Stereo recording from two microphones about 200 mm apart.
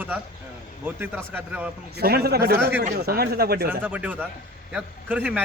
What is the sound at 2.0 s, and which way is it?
Speech, 50° right (ahead or behind).